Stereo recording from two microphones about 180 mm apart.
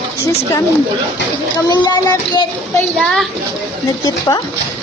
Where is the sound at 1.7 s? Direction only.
20° left (ahead or behind).